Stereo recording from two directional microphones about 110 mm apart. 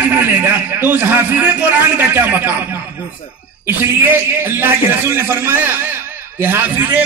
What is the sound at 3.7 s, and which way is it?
A man's voice, 20° right (ahead or behind).